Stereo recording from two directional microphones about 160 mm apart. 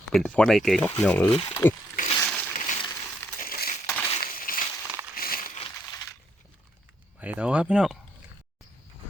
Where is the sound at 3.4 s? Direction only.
65° left (ahead or behind).